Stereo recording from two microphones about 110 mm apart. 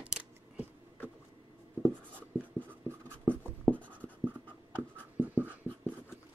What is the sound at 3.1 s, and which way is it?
Writing, 10° left (ahead or behind).